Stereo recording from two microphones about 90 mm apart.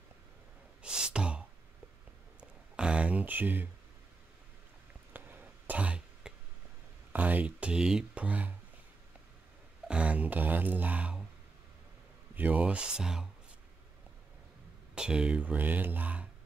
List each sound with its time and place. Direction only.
0.8 s sigh: 10° right (ahead or behind)
2.7 s speech: 10° right (ahead or behind)
5.1 s throat clearing: 20° right (ahead or behind)
7.1 s speech: 20° right (ahead or behind)
9.8 s a sound: 15° right (ahead or behind)
12.4 s speech: 20° right (ahead or behind)
15.0 s speech: 10° right (ahead or behind)